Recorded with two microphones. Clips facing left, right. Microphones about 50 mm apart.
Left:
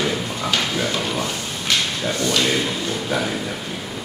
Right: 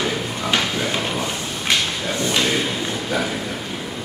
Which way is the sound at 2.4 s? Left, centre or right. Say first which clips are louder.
Even; centre.